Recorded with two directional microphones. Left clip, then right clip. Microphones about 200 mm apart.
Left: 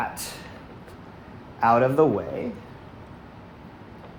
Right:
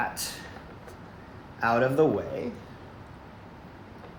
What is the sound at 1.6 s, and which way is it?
Speech, 25° left (ahead or behind).